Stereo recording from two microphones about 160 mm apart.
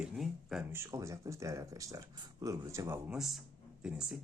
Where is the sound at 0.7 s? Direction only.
15° right (ahead or behind).